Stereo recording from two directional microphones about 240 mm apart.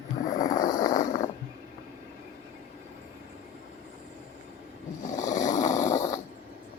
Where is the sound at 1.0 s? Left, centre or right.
Left.